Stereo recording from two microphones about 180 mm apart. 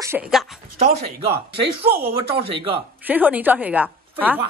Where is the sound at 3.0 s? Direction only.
10° right (ahead or behind).